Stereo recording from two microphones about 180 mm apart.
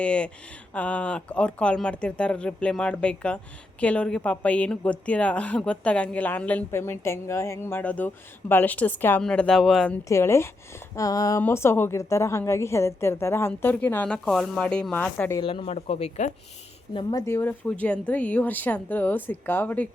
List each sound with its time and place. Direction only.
0.0 s speech: 5° left (ahead or behind)
10.1 s speech: 15° left (ahead or behind)
15.4 s speech: 30° left (ahead or behind)
16.9 s speech: 25° left (ahead or behind); by 19.9 s 10° left (ahead or behind)